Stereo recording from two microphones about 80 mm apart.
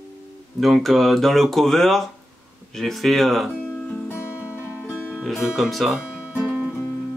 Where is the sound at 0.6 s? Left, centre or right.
Centre.